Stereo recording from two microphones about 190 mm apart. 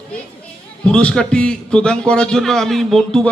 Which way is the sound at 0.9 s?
5° left (ahead or behind).